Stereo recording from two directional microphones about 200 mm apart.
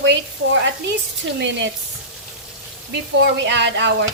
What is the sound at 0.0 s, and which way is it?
Speech, 65° right (ahead or behind).